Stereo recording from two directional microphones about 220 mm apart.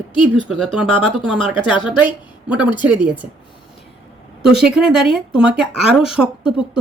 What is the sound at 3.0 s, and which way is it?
Speech, 5° right (ahead or behind).